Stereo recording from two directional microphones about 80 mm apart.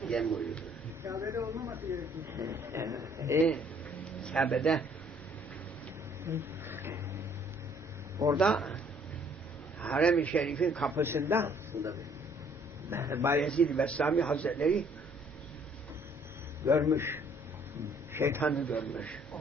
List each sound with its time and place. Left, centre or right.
0.0 s a sound: centre
1.0 s speech: right
1.7 s a man's voice: right
4.2 s a man's voice: centre
6.2 s a sound: right
8.4 s speech: centre
9.8 s a man's voice: centre
10.9 s a man's voice: right
13.4 s a man's voice: centre
16.6 s a man's voice: right
18.3 s a man's voice: centre